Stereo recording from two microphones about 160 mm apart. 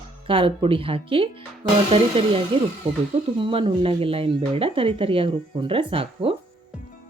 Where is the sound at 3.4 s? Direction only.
30° right (ahead or behind).